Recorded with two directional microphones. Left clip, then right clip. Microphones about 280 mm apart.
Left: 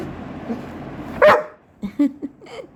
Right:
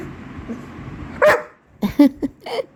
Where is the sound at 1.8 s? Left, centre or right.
Right.